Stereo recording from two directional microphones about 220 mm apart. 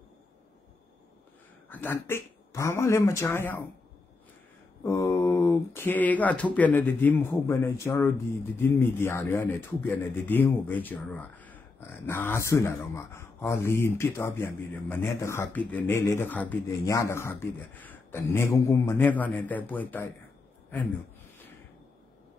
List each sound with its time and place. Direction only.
1.7 s speech: 10° left (ahead or behind)
4.8 s speech: 15° left (ahead or behind)